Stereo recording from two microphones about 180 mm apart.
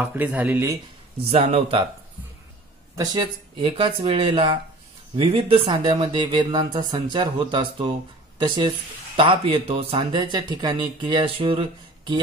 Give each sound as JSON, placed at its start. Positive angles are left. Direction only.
{"t": 0.0, "sound": "speech", "side_deg": -10}
{"t": 1.3, "sound": "speech", "side_deg": -30}
{"t": 3.0, "sound": "speech", "side_deg": -25}